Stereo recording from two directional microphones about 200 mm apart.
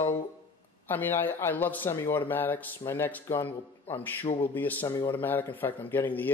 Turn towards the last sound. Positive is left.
turn(degrees=10)  # may be behind; listen again after turning